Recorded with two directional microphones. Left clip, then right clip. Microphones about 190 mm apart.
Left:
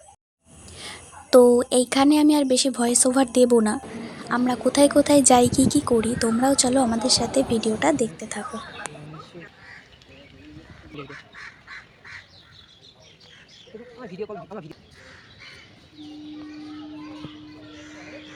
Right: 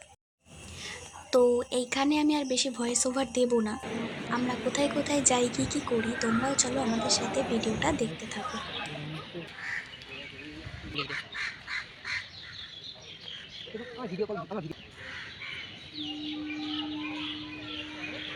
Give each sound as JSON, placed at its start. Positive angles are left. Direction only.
{"t": 0.8, "sound": "speech", "side_deg": 40}
{"t": 10.9, "sound": "speech", "side_deg": 55}
{"t": 14.2, "sound": "speech", "side_deg": -35}